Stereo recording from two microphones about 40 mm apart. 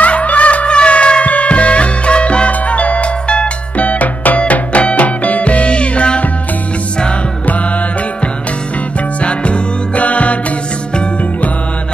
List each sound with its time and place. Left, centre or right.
0.0 s music: left
4.4 s music: left
9.2 s music: left